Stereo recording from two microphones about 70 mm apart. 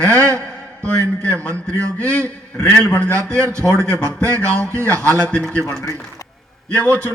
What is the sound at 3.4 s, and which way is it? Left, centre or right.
Speech, right.